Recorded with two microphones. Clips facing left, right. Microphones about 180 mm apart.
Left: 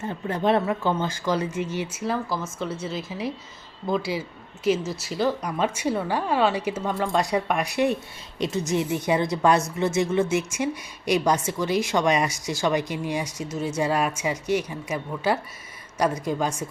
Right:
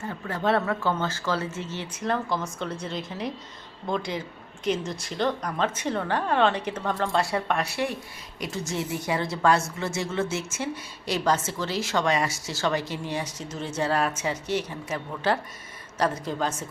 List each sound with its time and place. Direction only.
0.0 s a woman's voice: 20° left (ahead or behind)